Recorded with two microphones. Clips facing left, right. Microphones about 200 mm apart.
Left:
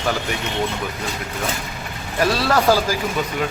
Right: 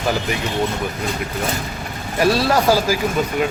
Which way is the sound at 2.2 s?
10° right (ahead or behind).